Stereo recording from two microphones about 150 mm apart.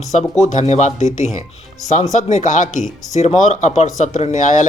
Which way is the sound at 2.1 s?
55° left (ahead or behind).